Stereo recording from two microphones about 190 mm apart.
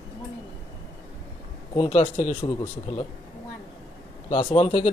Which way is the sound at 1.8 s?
35° left (ahead or behind).